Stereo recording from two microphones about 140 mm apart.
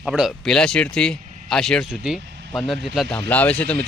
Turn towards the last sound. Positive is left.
turn(degrees=10)  # may be behind; listen again after turning